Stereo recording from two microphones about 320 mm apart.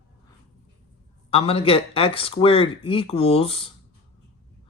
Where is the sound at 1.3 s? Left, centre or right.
Centre.